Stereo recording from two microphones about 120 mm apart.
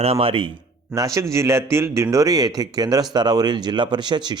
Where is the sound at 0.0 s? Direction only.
55° right (ahead or behind).